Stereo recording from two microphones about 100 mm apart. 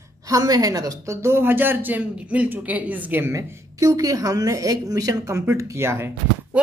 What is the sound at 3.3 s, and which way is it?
A woman's voice, 35° right (ahead or behind).